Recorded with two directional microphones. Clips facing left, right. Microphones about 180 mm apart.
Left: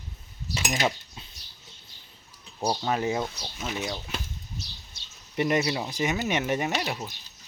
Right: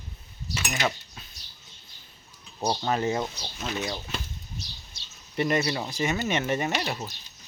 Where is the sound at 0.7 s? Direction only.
15° left (ahead or behind).